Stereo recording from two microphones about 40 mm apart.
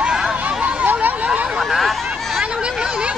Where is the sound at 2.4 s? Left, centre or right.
Right.